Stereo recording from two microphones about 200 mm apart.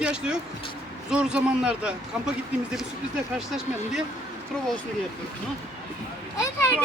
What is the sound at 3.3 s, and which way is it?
Speech, centre (ahead or behind).